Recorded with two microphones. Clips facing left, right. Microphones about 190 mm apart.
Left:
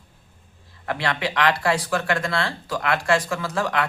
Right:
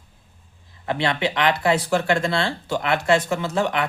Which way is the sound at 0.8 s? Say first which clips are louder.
Right 3 dB; 25° right (ahead or behind).